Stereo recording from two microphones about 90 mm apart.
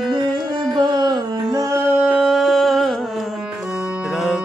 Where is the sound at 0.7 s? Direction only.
55° right (ahead or behind).